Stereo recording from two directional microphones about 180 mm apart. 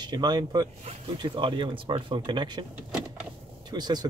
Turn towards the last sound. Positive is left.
turn(degrees=-25)  # may be behind; listen again after turning